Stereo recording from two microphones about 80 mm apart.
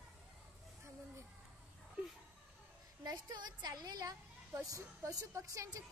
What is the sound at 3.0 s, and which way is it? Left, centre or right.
A woman's voice, right.